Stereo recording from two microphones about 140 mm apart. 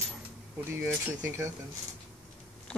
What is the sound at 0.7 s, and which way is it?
Speech, 20° right (ahead or behind).